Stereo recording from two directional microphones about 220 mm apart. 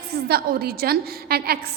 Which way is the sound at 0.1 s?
45° right (ahead or behind).